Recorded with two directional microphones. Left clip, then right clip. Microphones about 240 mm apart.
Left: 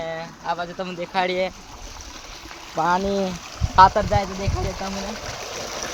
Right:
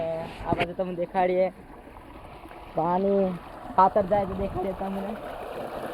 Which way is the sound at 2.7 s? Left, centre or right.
Centre.